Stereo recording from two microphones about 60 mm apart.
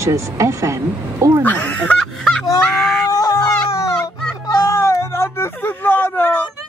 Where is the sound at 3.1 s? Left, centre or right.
Left.